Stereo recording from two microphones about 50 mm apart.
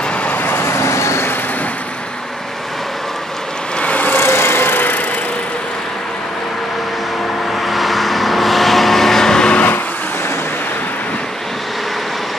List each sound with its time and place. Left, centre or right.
0.2 s vehicle: left
3.8 s vehicle: left
4.2 s vehicle: left
7.5 s vehicle: centre